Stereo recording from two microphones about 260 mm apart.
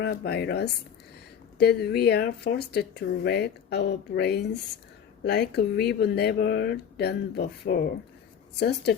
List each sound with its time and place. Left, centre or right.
0.0 s speech: left